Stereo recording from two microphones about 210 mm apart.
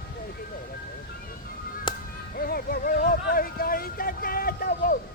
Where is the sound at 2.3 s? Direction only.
45° left (ahead or behind).